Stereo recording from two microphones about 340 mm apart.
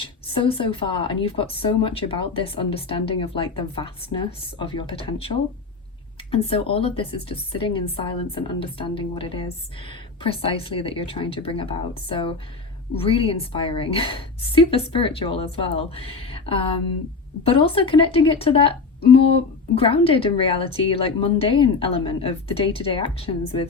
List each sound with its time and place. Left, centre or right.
0.0 s speech: centre